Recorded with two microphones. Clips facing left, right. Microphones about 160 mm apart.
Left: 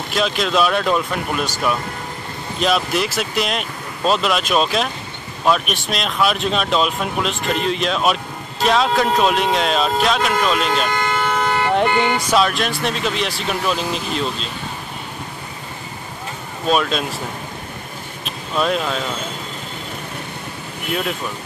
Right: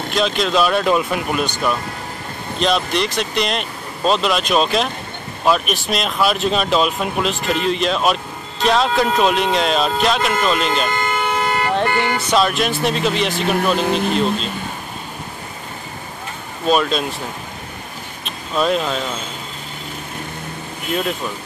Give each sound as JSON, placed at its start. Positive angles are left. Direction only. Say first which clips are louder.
{"t": 0.1, "sound": "speech", "louder": "right 1 dB", "side_deg": 0}
{"t": 11.6, "sound": "speech", "louder": "left 4 dB", "side_deg": 15}
{"t": 12.4, "sound": "speech", "louder": "right 3 dB", "side_deg": 0}
{"t": 13.8, "sound": "speech", "louder": "right 6 dB", "side_deg": -55}
{"t": 16.6, "sound": "speech", "louder": "right 2 dB", "side_deg": 0}
{"t": 18.2, "sound": "speech", "louder": "right 1 dB", "side_deg": 0}